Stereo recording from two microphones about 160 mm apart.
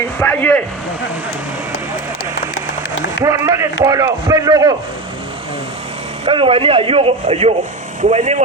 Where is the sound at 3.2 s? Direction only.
20° right (ahead or behind).